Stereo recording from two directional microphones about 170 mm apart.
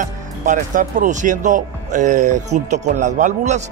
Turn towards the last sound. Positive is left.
turn(degrees=-45)  # may be behind; listen again after turning